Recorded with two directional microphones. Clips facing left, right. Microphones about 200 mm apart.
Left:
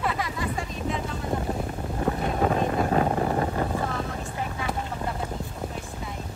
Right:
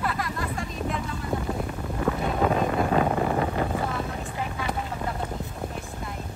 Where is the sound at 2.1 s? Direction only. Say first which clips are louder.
Right 1 dB; 25° left (ahead or behind).